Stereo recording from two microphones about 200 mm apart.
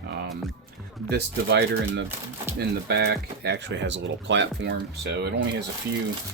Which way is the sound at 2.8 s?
55° right (ahead or behind).